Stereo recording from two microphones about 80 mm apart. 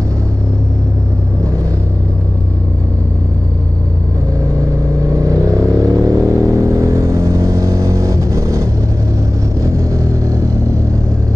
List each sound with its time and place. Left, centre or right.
5.1 s vehicle: right